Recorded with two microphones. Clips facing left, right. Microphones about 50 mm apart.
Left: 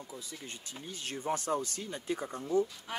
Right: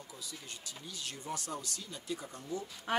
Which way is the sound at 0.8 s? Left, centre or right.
Left.